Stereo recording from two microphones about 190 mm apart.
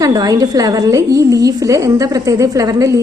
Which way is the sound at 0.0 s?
20° right (ahead or behind).